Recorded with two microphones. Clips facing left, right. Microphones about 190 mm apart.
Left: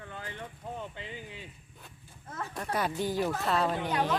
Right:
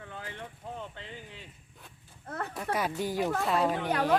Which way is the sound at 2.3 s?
60° right (ahead or behind).